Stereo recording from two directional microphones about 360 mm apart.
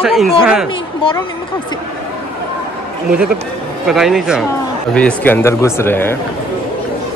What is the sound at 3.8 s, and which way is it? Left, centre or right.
Speech, centre.